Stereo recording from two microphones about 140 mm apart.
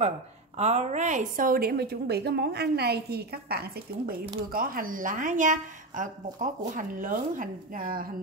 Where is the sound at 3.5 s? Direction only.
90° right.